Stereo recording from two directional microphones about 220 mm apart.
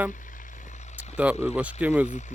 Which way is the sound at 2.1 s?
35° left (ahead or behind).